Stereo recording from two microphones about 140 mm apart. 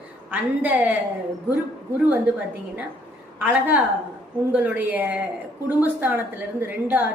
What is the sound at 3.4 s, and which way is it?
A woman's voice, 10° right (ahead or behind).